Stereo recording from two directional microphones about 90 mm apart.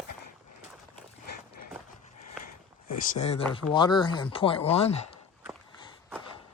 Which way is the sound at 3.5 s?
60° left (ahead or behind).